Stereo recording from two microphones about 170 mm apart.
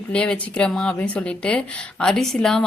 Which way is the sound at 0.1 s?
5° left (ahead or behind).